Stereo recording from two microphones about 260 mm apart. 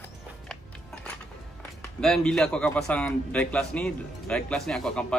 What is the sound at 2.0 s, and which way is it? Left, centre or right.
A man's voice, centre.